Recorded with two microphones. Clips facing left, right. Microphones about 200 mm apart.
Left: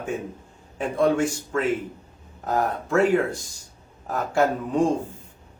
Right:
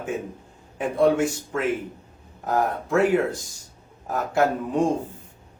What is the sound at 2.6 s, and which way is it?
A man's voice, centre (ahead or behind).